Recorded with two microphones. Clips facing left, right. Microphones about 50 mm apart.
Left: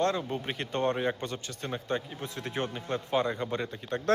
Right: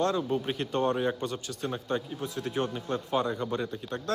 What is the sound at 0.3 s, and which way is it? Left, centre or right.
A man's voice, left.